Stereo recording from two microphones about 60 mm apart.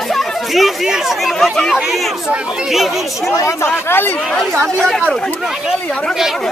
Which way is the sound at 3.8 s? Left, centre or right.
Left.